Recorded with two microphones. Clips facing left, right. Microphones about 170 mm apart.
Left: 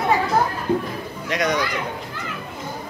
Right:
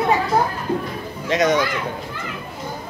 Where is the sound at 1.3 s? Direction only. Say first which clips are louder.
Right 5 dB; 25° right (ahead or behind).